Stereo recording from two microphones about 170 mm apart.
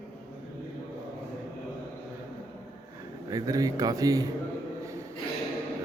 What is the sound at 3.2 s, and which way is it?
Speech, 20° right (ahead or behind).